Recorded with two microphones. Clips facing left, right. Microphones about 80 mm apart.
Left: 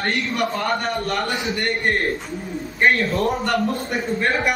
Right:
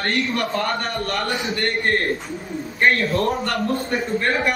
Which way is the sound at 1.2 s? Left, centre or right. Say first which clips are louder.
Even; centre.